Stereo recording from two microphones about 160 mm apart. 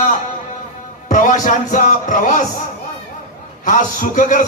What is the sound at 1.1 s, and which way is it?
A man's voice, 55° left (ahead or behind).